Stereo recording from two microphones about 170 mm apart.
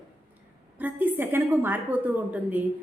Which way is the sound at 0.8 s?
10° right (ahead or behind).